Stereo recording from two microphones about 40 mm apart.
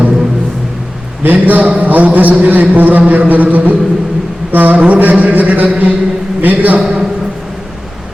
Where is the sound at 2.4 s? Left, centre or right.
Right.